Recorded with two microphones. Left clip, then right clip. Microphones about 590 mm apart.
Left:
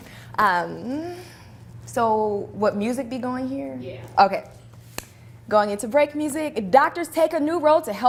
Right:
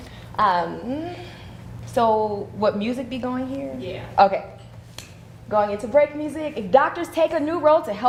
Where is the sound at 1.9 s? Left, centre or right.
Left.